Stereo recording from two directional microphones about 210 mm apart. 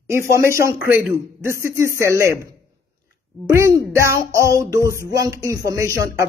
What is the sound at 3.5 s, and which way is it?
Speech, 15° right (ahead or behind).